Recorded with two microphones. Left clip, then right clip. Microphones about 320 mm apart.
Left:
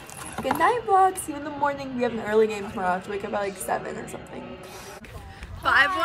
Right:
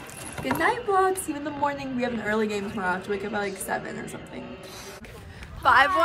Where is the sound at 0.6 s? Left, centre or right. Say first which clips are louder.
Left 3 dB; centre.